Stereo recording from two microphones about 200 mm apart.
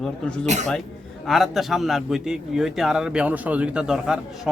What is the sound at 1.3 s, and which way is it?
A man's voice, centre (ahead or behind).